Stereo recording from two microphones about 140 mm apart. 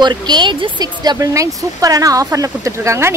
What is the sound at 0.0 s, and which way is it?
Speech, 30° right (ahead or behind).